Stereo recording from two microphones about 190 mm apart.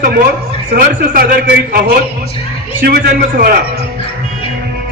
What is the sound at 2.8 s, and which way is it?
Speech, 55° right (ahead or behind).